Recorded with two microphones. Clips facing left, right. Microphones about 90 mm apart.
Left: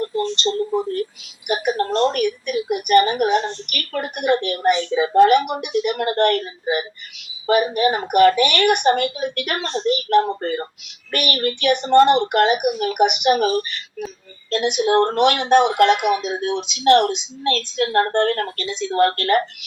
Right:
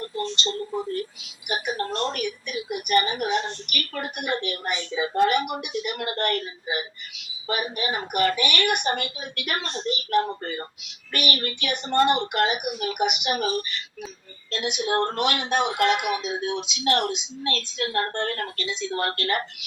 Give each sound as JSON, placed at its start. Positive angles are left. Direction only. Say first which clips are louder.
{"t": 0.5, "sound": "a woman's voice", "louder": "left 7 dB", "side_deg": 45}
{"t": 18.8, "sound": "a woman's voice", "louder": "left 10 dB", "side_deg": 50}